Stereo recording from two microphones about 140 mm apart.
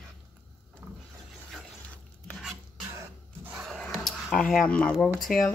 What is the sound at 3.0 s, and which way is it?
Cough, 10° right (ahead or behind).